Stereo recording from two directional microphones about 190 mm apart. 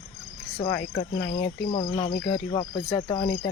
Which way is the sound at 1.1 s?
20° left (ahead or behind).